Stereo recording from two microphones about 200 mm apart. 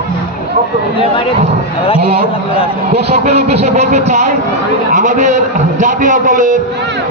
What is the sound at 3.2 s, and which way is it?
A man's voice, 35° right (ahead or behind).